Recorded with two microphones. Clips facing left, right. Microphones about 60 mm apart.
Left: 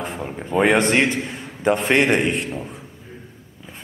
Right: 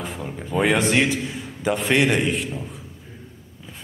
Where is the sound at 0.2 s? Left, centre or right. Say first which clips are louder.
Left 2 dB; left.